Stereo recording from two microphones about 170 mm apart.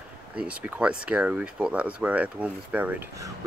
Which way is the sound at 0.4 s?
10° right (ahead or behind).